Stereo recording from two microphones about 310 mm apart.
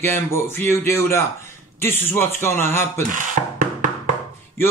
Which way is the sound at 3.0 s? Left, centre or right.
Right.